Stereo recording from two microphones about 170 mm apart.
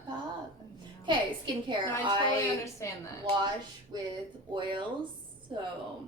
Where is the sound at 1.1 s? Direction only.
30° right (ahead or behind).